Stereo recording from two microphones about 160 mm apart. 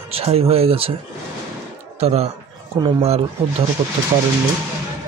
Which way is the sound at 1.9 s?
40° right (ahead or behind).